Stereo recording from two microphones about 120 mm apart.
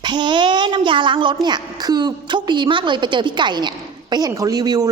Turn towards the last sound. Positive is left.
turn(degrees=-35)  # may be behind; listen again after turning